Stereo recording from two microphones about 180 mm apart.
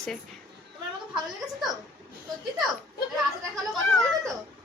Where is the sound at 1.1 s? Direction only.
Centre (ahead or behind).